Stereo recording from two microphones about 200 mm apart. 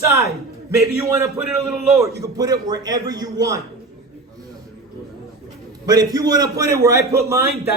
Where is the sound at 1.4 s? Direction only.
5° right (ahead or behind).